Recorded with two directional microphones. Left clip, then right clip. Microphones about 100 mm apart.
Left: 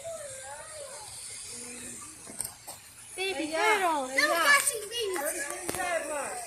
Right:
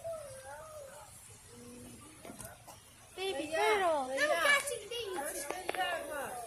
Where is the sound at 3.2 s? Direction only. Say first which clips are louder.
Left 4 dB; 65° right (ahead or behind).